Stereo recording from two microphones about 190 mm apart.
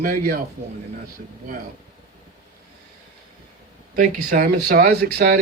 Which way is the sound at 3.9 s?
40° right (ahead or behind).